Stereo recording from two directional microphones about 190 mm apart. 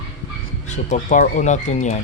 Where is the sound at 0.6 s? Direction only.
40° left (ahead or behind).